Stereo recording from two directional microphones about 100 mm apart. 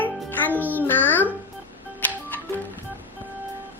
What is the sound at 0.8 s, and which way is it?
Music, 20° left (ahead or behind).